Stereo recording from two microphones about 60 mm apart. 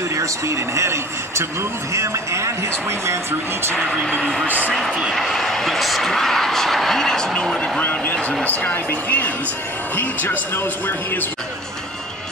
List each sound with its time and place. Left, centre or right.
0.1 s a man's voice: right
4.0 s speech: centre
4.5 s speech: right
5.1 s speech: centre
7.8 s speech: left